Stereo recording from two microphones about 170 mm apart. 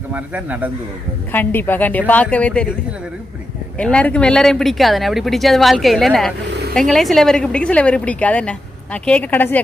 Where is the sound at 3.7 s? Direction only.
5° left (ahead or behind).